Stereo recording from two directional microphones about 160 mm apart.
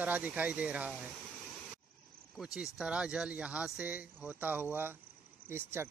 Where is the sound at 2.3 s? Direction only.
5° right (ahead or behind).